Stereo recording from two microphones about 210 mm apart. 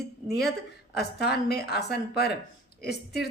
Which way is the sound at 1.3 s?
50° left (ahead or behind).